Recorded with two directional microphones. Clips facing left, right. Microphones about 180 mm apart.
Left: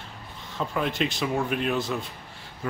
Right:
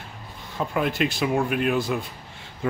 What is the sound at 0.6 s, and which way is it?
Speech, 5° right (ahead or behind).